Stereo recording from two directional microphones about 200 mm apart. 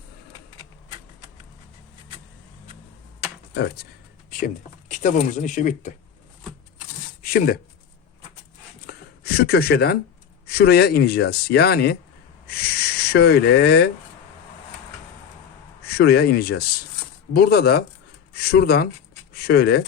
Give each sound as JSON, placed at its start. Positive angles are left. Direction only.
{"t": 4.3, "sound": "speech", "side_deg": 40}
{"t": 7.2, "sound": "speech", "side_deg": 45}
{"t": 8.9, "sound": "a sound", "side_deg": 50}
{"t": 10.4, "sound": "speech", "side_deg": 50}
{"t": 15.9, "sound": "speech", "side_deg": 55}